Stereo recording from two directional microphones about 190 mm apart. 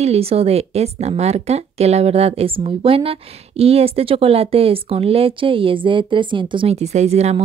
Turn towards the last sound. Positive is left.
turn(degrees=-35)  # may be behind; listen again after turning